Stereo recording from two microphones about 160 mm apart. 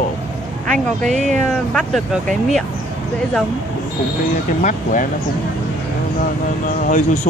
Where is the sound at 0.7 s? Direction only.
5° left (ahead or behind).